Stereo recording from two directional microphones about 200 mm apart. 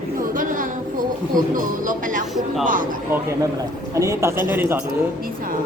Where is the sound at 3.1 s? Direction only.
10° right (ahead or behind).